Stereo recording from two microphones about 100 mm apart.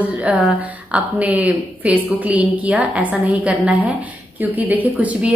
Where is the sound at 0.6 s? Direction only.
15° right (ahead or behind).